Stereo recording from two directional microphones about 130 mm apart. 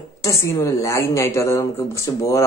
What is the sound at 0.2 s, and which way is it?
A woman's voice, 20° left (ahead or behind).